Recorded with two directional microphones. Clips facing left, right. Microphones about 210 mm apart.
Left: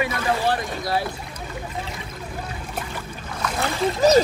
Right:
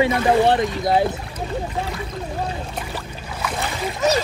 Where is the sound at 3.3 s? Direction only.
5° right (ahead or behind).